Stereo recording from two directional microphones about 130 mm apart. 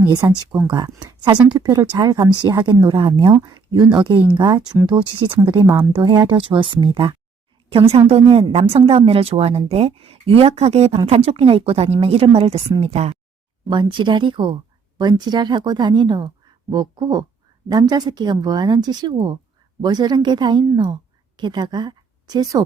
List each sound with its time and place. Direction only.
0.1 s speech: 30° right (ahead or behind)
1.0 s speech: 30° right (ahead or behind)
5.5 s speech: 20° right (ahead or behind)
5.9 s speech: 35° right (ahead or behind)
7.9 s a woman's voice: 50° right (ahead or behind)
13.7 s speech: 40° right (ahead or behind)